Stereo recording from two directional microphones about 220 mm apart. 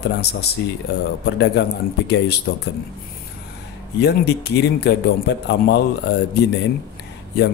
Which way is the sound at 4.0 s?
50° left (ahead or behind).